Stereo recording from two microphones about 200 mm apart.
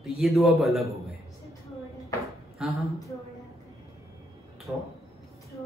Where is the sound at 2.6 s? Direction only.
5° right (ahead or behind).